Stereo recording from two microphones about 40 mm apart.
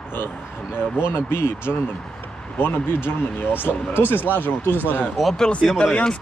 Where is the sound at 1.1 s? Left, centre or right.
Left.